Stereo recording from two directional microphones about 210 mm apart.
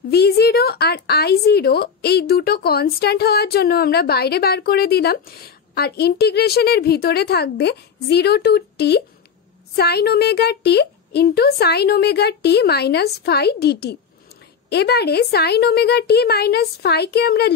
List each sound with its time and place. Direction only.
0.1 s speech: 50° left (ahead or behind)